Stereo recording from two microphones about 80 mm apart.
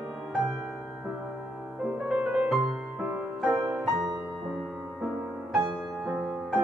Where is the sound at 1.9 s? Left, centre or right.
Centre.